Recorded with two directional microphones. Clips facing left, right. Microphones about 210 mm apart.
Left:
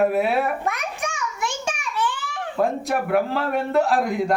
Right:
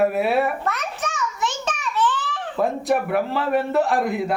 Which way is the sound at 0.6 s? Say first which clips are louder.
Even; 10° left (ahead or behind).